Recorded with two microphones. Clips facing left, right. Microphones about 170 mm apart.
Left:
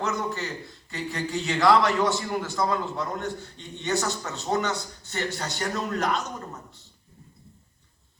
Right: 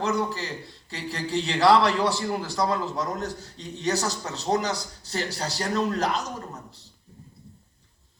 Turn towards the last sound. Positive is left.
turn(degrees=-35)  # may be behind; listen again after turning